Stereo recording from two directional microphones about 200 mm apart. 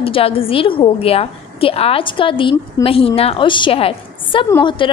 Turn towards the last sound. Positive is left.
turn(degrees=25)  # may be behind; listen again after turning